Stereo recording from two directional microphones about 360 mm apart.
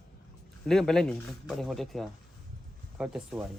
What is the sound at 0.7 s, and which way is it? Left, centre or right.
Speech, centre.